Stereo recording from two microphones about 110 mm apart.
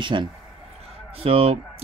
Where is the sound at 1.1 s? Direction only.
60° right (ahead or behind).